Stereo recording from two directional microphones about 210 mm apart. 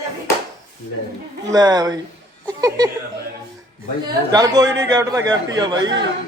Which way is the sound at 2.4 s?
20° right (ahead or behind).